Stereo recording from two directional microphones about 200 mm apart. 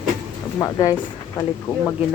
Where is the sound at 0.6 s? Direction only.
15° left (ahead or behind).